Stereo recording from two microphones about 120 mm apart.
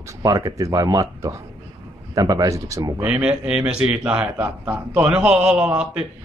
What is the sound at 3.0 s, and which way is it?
A man's voice, 10° right (ahead or behind).